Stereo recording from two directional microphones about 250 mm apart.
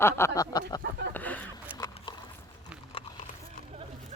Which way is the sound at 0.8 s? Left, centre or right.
Right.